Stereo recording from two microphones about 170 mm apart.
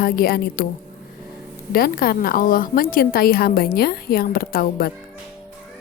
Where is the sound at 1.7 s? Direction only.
60° left (ahead or behind).